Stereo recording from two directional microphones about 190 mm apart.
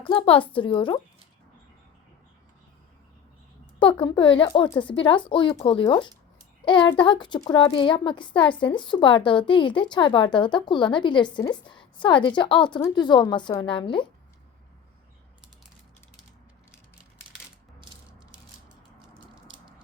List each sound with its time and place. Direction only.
0.0 s a woman's voice: 25° left (ahead or behind)
4.0 s a woman's voice: 25° left (ahead or behind)